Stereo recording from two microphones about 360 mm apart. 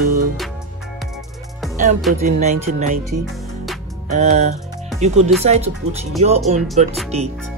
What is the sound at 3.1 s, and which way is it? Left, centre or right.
Speech, right.